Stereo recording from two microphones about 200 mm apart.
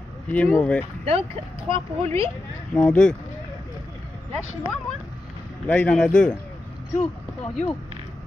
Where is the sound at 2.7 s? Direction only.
5° left (ahead or behind).